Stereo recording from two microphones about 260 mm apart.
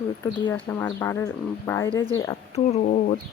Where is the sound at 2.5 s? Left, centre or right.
Left.